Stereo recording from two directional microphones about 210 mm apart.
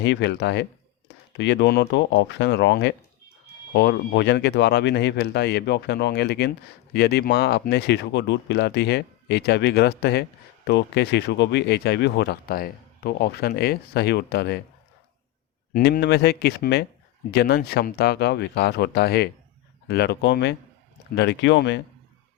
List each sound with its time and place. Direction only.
0.0 s speech: 55° left (ahead or behind)
15.7 s speech: 50° left (ahead or behind)